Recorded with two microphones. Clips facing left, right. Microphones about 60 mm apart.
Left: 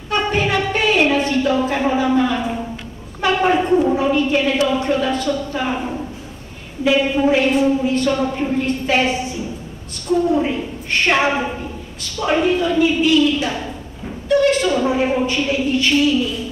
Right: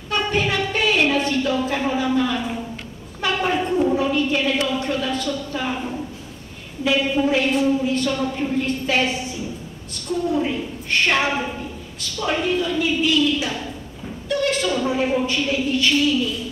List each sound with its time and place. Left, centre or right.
0.1 s music: centre
0.7 s a sound: centre
4.6 s a woman's voice: left
10.3 s a woman's voice: left
13.5 s a sound: centre
15.3 s speech: centre